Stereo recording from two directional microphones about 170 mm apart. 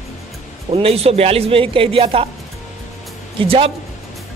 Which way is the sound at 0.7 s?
35° right (ahead or behind).